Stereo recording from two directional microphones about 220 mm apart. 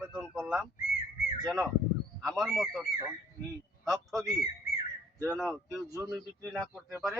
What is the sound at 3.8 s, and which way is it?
Speech, centre (ahead or behind).